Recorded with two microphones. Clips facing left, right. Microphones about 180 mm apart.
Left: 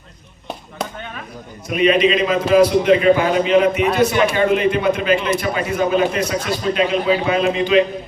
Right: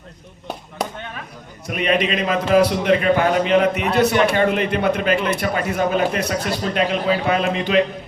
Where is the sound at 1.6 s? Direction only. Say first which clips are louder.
Left 5 dB; 55° right (ahead or behind).